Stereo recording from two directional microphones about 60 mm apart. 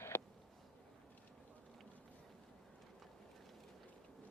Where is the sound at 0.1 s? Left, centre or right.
Left.